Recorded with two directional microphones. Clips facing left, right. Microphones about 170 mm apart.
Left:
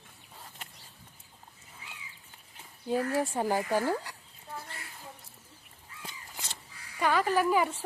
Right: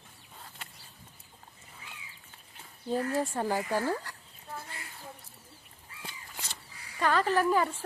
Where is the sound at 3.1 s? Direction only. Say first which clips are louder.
Left 1 dB; 15° left (ahead or behind).